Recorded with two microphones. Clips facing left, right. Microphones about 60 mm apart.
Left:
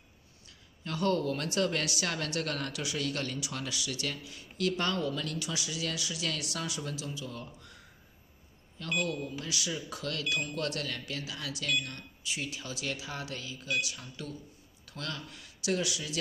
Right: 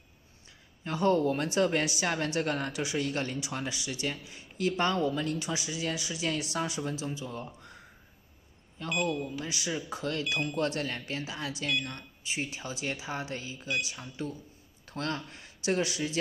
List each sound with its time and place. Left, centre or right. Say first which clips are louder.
0.8 s speech: right 4 dB; right